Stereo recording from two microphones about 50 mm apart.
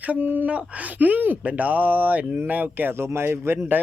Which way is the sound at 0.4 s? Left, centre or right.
Right.